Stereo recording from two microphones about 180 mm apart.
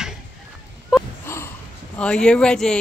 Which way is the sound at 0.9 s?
5° right (ahead or behind).